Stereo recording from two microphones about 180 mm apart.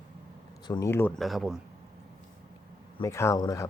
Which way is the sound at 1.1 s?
Centre (ahead or behind).